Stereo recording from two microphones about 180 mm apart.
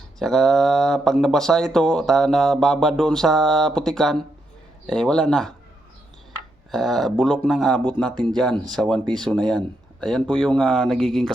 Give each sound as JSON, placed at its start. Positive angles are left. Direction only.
{"t": 0.2, "sound": "speech", "side_deg": 0}
{"t": 6.7, "sound": "speech", "side_deg": 0}